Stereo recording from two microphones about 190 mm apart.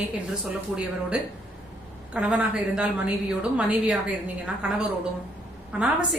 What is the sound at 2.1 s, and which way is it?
A woman's voice, 5° right (ahead or behind).